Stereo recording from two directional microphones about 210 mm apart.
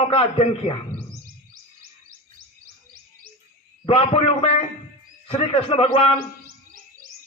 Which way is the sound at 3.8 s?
25° left (ahead or behind).